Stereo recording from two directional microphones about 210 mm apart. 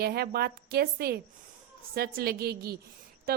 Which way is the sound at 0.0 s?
50° right (ahead or behind).